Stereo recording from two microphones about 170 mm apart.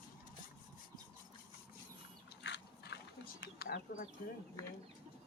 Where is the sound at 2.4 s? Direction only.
90° left.